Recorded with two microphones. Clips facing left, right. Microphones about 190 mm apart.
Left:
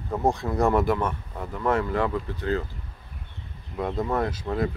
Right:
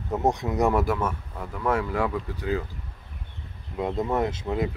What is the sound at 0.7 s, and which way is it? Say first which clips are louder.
Speech: left 3 dB; 5° right (ahead or behind).